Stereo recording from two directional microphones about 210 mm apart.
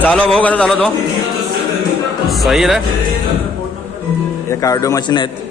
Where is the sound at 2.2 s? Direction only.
Centre (ahead or behind).